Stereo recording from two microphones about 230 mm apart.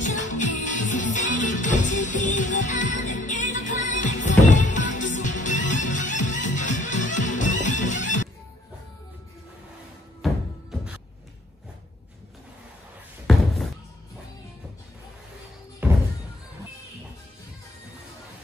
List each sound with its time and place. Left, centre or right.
0.0 s music: left
10.2 s music: centre
13.3 s a sound: centre
15.8 s music: centre